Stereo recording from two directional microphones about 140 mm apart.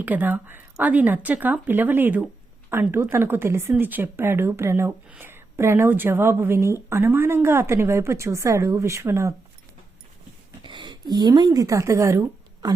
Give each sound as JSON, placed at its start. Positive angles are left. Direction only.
{"t": 0.0, "sound": "speech", "side_deg": -10}
{"t": 10.6, "sound": "speech", "side_deg": -35}